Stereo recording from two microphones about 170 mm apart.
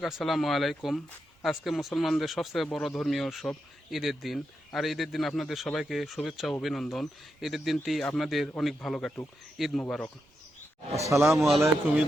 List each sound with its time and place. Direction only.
0.0 s speech: centre (ahead or behind)
11.0 s a man's voice: 15° right (ahead or behind)
11.3 s speech: centre (ahead or behind)